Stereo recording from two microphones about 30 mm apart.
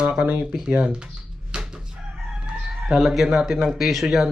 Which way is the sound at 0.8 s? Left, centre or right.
Right.